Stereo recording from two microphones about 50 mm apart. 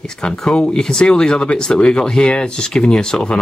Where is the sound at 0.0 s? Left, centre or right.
Centre.